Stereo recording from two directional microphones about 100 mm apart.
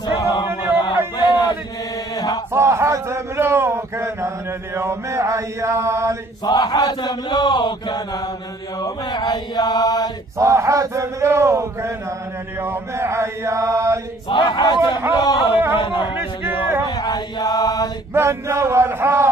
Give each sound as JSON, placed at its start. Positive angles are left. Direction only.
{"t": 0.0, "sound": "music", "side_deg": 45}
{"t": 1.1, "sound": "a sound", "side_deg": 45}
{"t": 2.1, "sound": "chant", "side_deg": 40}
{"t": 2.5, "sound": "a sound", "side_deg": -30}
{"t": 4.7, "sound": "speech", "side_deg": -25}
{"t": 6.4, "sound": "speech", "side_deg": 45}
{"t": 8.8, "sound": "mantra", "side_deg": 45}
{"t": 10.3, "sound": "speech", "side_deg": -30}
{"t": 14.3, "sound": "speech", "side_deg": 50}
{"t": 16.2, "sound": "a sound", "side_deg": -20}
{"t": 16.8, "sound": "chant", "side_deg": 45}
{"t": 18.1, "sound": "speech", "side_deg": -30}